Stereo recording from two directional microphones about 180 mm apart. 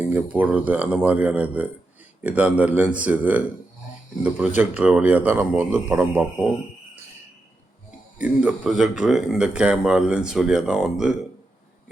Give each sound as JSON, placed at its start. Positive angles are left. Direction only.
{"t": 0.0, "sound": "a man's voice", "side_deg": -10}
{"t": 7.9, "sound": "speech", "side_deg": -5}